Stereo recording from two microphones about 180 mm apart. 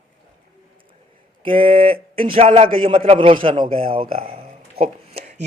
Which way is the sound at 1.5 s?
30° right (ahead or behind).